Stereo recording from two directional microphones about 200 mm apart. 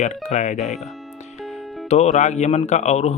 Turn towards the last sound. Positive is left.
turn(degrees=35)  # may be behind; listen again after turning